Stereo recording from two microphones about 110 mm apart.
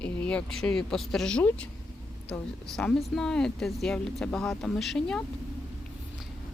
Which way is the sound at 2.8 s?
5° left (ahead or behind).